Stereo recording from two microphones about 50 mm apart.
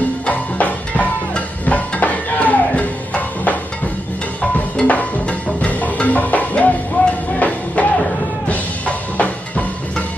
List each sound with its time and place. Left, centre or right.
0.3 s music: left